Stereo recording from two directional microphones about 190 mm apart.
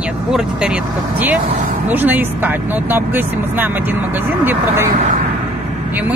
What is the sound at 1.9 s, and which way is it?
Speech, 10° right (ahead or behind).